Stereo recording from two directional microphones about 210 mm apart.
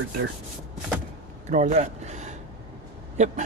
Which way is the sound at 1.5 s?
35° right (ahead or behind).